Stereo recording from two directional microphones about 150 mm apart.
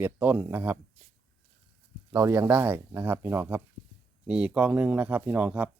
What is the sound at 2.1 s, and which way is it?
Speech, 20° right (ahead or behind).